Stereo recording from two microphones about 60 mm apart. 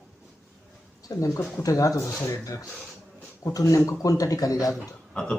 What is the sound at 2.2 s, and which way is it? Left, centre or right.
Speech, left.